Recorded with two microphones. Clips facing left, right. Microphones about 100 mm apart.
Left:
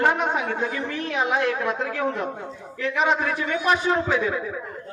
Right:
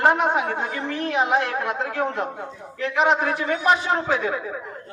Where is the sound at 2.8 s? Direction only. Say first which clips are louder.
Right 2 dB; 30° right (ahead or behind).